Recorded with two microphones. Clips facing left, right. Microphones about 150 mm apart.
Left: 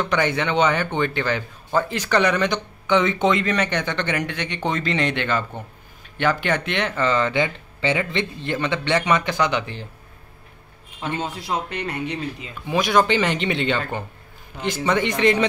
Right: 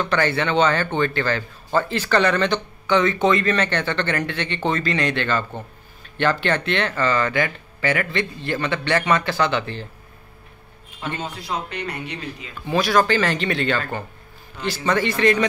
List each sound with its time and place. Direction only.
0.0 s speech: 15° left (ahead or behind)
11.0 s a man's voice: 15° left (ahead or behind)
11.4 s speech: 25° left (ahead or behind)